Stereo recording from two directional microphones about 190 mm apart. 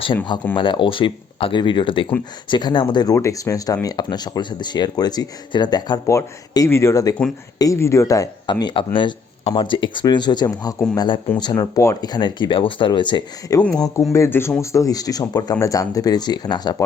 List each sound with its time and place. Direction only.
0.5 s speech: 25° left (ahead or behind)
13.6 s speech: 5° left (ahead or behind)